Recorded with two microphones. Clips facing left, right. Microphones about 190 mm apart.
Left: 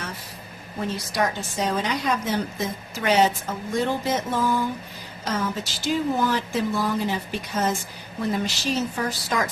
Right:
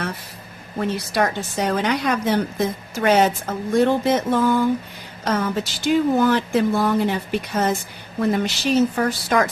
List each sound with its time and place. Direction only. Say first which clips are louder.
1.1 s a woman's voice: right 2 dB; 65° right (ahead or behind)